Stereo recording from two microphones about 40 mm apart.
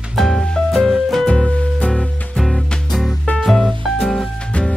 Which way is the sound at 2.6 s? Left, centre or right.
Left.